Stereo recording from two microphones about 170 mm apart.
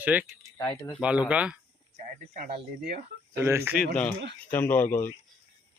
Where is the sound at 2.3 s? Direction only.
45° right (ahead or behind).